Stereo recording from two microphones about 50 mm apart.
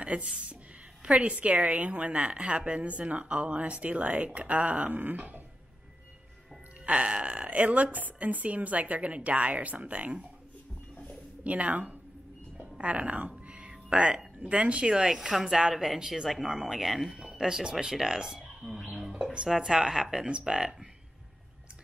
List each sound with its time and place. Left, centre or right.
0.0 s a woman's voice: right
6.9 s a woman's voice: right
11.4 s speech: right; by 17.2 s centre
17.2 s speech: centre
18.9 s a sound: centre
19.3 s speech: centre